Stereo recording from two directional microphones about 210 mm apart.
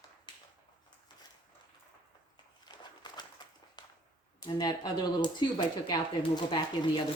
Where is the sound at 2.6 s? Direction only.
20° left (ahead or behind).